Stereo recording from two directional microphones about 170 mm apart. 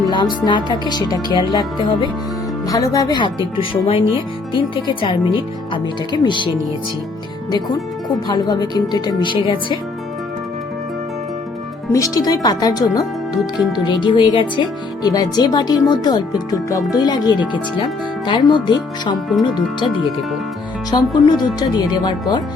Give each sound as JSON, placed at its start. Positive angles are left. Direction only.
{"t": 0.0, "sound": "speech", "side_deg": 25}
{"t": 8.3, "sound": "speech", "side_deg": 25}
{"t": 11.9, "sound": "speech", "side_deg": 20}
{"t": 20.9, "sound": "speech", "side_deg": 25}